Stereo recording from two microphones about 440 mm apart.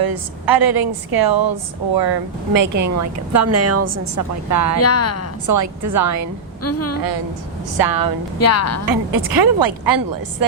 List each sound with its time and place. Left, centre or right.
0.0 s speech: right
4.8 s a woman's voice: left
5.5 s speech: right
6.6 s a woman's voice: left
7.9 s speech: right
8.4 s a woman's voice: left
8.9 s speech: right